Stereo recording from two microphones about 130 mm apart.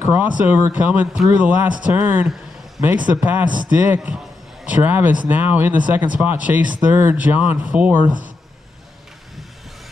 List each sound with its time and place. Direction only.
0.0 s speech: 15° right (ahead or behind)